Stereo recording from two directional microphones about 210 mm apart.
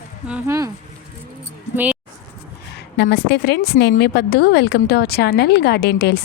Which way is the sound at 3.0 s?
50° left (ahead or behind).